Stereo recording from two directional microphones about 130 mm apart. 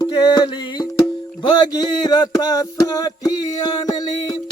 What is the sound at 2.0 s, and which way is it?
Music, 30° left (ahead or behind).